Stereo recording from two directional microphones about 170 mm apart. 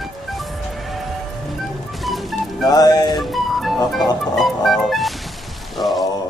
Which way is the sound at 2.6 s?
20° left (ahead or behind).